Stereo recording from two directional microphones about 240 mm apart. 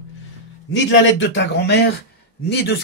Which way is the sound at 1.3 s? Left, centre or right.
Left.